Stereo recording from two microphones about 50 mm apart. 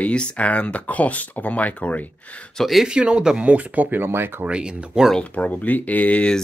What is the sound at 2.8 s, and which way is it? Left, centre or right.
Speech, centre.